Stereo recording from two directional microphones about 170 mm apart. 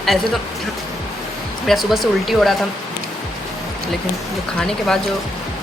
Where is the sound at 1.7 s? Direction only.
Centre (ahead or behind).